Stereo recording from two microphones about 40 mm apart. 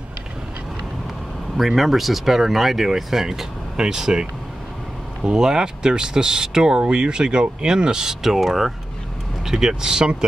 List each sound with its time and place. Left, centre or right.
1.8 s speech: centre
9.5 s speech: centre